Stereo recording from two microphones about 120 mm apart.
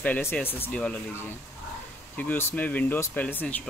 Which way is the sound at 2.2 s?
20° left (ahead or behind).